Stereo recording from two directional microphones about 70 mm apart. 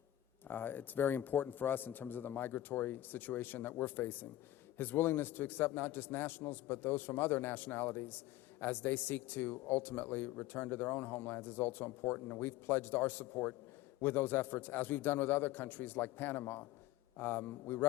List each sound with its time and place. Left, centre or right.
0.4 s speech: left